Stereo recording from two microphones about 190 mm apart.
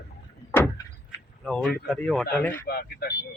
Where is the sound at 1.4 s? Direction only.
Centre (ahead or behind).